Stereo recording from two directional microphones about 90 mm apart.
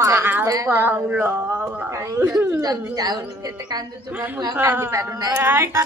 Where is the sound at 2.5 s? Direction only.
45° right (ahead or behind).